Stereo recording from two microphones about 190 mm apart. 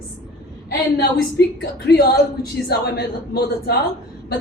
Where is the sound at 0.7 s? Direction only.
60° left (ahead or behind).